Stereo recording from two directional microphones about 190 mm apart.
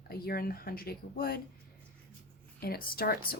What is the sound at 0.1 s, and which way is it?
Speech, 55° left (ahead or behind).